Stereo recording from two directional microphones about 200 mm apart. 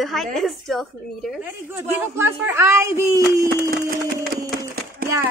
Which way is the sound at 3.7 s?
45° right (ahead or behind).